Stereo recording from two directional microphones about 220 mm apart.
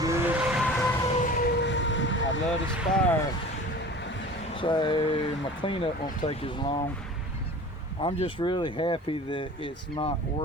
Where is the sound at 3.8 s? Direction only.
50° left (ahead or behind).